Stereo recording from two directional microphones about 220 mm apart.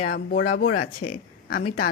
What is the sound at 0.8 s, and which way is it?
Speech, 90° left.